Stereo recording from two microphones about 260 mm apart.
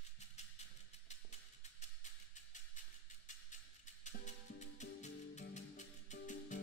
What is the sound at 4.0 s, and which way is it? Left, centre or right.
Music, left.